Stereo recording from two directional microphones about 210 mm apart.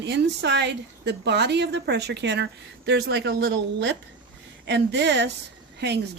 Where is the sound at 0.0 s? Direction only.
55° right (ahead or behind).